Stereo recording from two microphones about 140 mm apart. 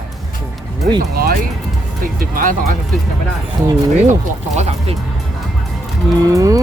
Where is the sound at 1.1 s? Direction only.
90° right.